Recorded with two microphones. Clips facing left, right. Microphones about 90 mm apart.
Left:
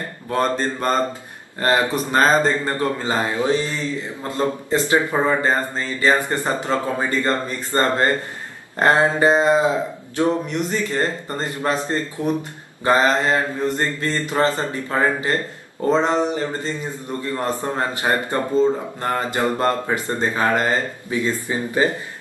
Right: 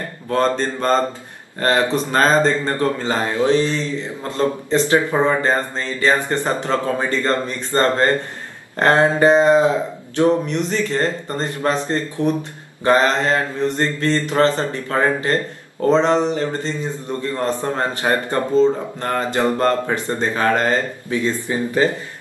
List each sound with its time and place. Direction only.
0.3 s a man's voice: 15° left (ahead or behind)
5.1 s a man's voice: 5° left (ahead or behind)